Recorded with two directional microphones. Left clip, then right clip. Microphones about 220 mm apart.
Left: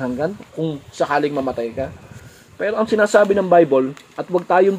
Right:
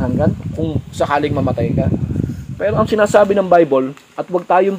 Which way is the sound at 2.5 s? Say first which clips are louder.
Right 3 dB; 30° right (ahead or behind).